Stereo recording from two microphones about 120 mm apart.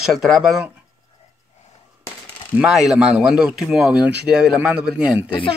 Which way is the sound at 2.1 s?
10° right (ahead or behind).